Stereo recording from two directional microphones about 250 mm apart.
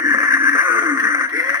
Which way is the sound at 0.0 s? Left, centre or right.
Centre.